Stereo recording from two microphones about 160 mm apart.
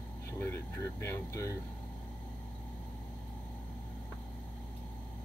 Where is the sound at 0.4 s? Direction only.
15° left (ahead or behind).